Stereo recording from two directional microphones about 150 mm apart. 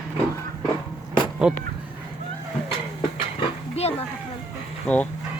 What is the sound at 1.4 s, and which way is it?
Speech, 5° right (ahead or behind).